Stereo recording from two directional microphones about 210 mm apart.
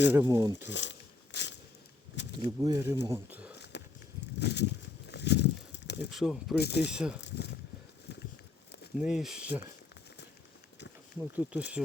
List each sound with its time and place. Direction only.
0.1 s speech: 15° right (ahead or behind)
0.6 s a sound: 60° left (ahead or behind)
2.4 s speech: 20° right (ahead or behind)
3.6 s a sound: 55° left (ahead or behind)
6.1 s speech: centre (ahead or behind)
6.6 s speech: 50° left (ahead or behind)
6.8 s speech: 5° right (ahead or behind)
7.2 s speech: 55° left (ahead or behind)
9.0 s speech: centre (ahead or behind)
11.2 s speech: 5° right (ahead or behind)